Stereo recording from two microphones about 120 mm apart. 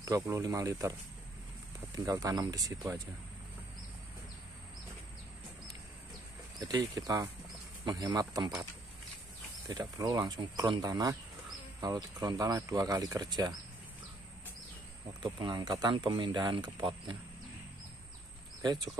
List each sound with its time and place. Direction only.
0.0 s speech: 25° right (ahead or behind)
2.0 s speech: 30° right (ahead or behind)
6.6 s speech: 35° right (ahead or behind)
9.7 s speech: 30° right (ahead or behind)
15.3 s speech: 40° right (ahead or behind)